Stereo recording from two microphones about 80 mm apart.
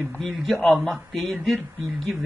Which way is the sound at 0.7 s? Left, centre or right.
Centre.